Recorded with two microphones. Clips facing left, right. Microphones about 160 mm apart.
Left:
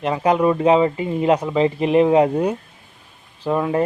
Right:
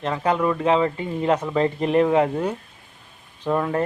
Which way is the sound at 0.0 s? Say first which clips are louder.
Left 4 dB; 15° left (ahead or behind).